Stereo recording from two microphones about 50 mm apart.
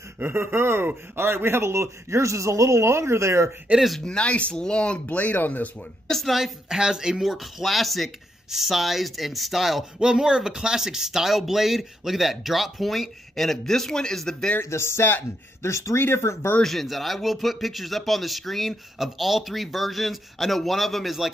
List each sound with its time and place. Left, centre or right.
0.2 s a man's voice: right
3.7 s speech: centre
4.0 s speech: left
6.0 s a woman's voice: centre
6.3 s speech: centre
9.9 s speech: centre
14.6 s speech: left
16.0 s speech: left
16.6 s speech: centre